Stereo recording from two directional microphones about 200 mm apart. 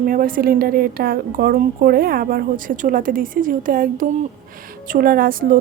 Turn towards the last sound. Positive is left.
turn(degrees=-45)  # may be behind; listen again after turning